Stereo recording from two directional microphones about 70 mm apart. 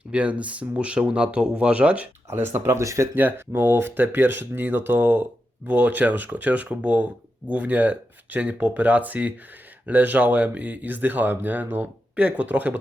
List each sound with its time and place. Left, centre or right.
0.1 s speech: centre
2.3 s speech: right
2.8 s speech: right
3.2 s speech: right